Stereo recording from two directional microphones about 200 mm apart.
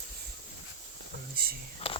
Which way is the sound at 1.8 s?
30° left (ahead or behind).